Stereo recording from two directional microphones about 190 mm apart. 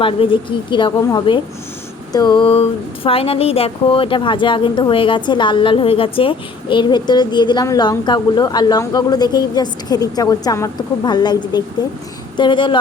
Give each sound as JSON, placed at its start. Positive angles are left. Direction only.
{"t": 0.0, "sound": "speech", "side_deg": 25}